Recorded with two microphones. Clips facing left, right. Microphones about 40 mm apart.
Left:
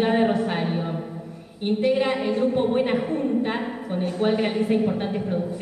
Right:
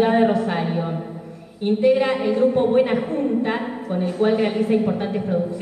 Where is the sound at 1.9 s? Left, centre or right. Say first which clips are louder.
Right 3 dB; centre.